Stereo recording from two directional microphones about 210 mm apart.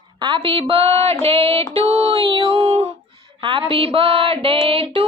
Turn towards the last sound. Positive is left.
turn(degrees=-25)  # may be behind; listen again after turning